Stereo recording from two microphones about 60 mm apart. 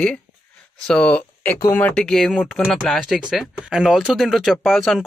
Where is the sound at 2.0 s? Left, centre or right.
Centre.